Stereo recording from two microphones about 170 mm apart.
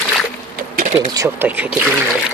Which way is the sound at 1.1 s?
15° right (ahead or behind).